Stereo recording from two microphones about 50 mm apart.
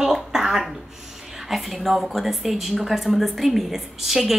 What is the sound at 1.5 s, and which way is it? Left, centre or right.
A woman's voice, centre.